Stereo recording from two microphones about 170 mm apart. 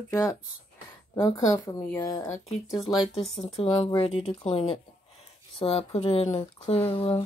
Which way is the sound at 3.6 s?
35° left (ahead or behind).